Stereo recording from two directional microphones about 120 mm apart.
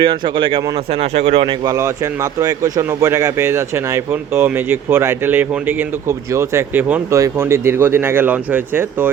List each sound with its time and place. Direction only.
0.0 s speech: 40° right (ahead or behind)
1.1 s speech: 60° right (ahead or behind)
2.4 s speech: 30° right (ahead or behind)